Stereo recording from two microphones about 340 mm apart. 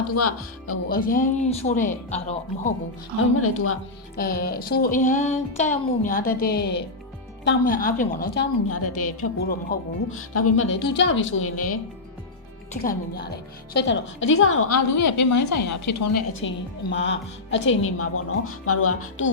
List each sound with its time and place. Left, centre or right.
0.1 s a woman's voice: left
0.9 s speech: left
3.3 s a woman's voice: left
4.2 s speech: left
8.7 s a woman's voice: left
12.8 s a woman's voice: left
14.9 s a woman's voice: left
16.4 s a woman's voice: left